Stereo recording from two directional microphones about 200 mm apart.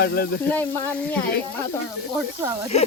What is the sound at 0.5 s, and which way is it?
Speech, 10° left (ahead or behind).